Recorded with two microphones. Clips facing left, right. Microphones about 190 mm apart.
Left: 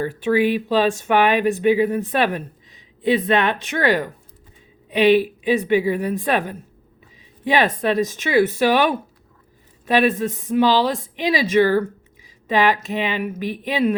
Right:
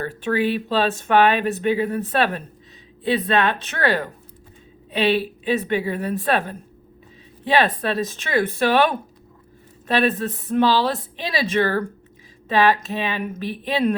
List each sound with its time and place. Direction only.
0.0 s speech: 10° left (ahead or behind)